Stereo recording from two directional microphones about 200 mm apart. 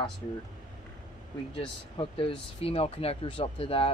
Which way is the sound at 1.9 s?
30° left (ahead or behind).